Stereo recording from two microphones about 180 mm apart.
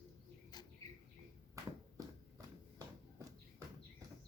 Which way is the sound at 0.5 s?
20° left (ahead or behind).